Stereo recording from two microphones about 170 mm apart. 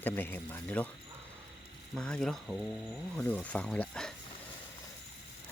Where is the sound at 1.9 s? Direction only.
5° left (ahead or behind).